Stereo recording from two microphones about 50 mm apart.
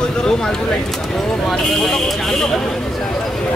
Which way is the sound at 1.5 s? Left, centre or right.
Centre.